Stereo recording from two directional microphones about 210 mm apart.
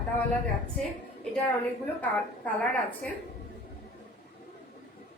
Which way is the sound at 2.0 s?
5° left (ahead or behind).